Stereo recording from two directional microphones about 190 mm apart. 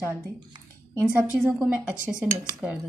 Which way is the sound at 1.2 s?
10° right (ahead or behind).